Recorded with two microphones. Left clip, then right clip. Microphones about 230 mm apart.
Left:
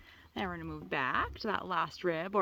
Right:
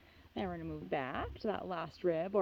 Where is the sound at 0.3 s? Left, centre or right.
Left.